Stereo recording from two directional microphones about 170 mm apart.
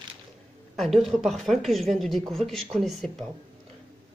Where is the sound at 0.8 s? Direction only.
Centre (ahead or behind).